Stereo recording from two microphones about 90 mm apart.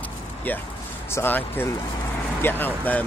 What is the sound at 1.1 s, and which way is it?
Speech, 25° left (ahead or behind).